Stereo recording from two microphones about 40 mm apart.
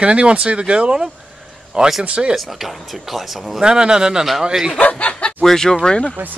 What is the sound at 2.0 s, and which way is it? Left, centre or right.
Speech, right.